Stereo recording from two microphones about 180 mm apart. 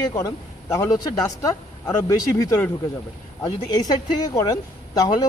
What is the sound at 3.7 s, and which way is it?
Speech, 20° left (ahead or behind).